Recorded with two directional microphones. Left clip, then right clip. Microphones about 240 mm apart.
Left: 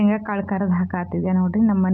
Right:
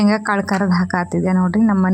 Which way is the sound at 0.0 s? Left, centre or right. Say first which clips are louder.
Right 6 dB; right.